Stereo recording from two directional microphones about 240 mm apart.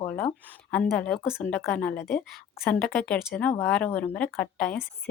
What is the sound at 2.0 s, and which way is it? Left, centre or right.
Speech, left.